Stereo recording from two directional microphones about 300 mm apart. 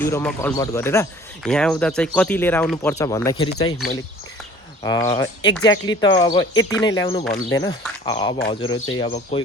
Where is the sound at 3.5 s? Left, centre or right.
Left.